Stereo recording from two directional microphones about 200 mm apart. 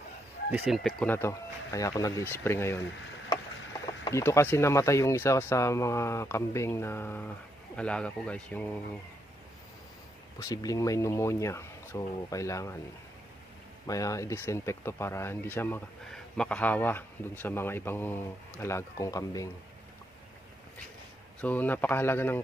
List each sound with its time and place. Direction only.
0.5 s speech: 5° right (ahead or behind)
4.0 s a man's voice: 15° left (ahead or behind)
10.4 s speech: 20° left (ahead or behind)
13.8 s speech: 15° left (ahead or behind)
21.4 s speech: 10° left (ahead or behind)